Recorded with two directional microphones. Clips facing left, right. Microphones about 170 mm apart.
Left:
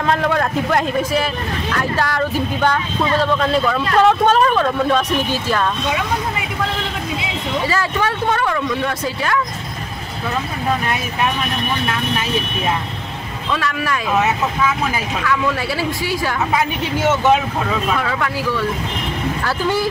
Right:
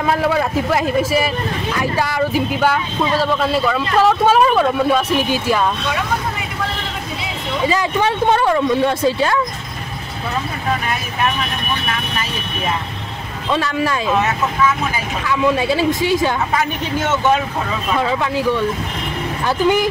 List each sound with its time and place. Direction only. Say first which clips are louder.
0.0 s a man's voice: right 1 dB; 5° right (ahead or behind)
7.6 s speech: right 5 dB; 20° right (ahead or behind)
13.5 s speech: right 3 dB; 25° right (ahead or behind)
15.2 s speech: right 5 dB; 20° right (ahead or behind)
17.9 s speech: right 3 dB; 20° right (ahead or behind)